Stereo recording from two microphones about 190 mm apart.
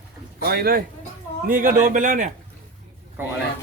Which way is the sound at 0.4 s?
55° right (ahead or behind).